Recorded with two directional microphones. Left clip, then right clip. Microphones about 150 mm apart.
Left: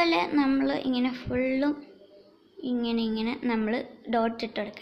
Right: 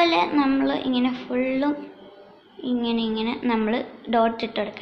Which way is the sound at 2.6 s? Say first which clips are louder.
Right 4 dB; 45° left (ahead or behind).